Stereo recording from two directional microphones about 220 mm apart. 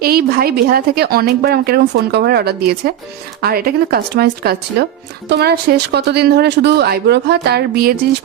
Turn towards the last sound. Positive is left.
turn(degrees=-45)  # may be behind; listen again after turning